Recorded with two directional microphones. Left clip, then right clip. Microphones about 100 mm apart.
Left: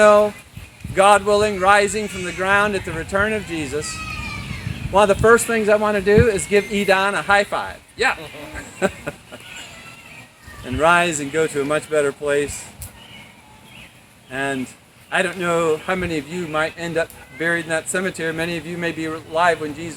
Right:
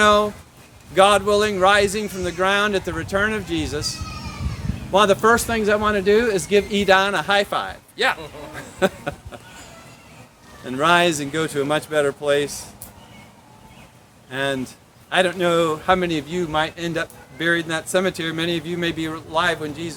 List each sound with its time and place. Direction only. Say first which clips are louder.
0.0 s speech: left 4 dB; 60° right (ahead or behind)
4.9 s speech: left 2 dB; 60° right (ahead or behind)
8.5 s a sound: right 1 dB; 45° right (ahead or behind)
10.8 s speech: left 1 dB; 55° right (ahead or behind)
14.3 s speech: even; 45° right (ahead or behind)
15.9 s speech: right 4 dB; 45° right (ahead or behind)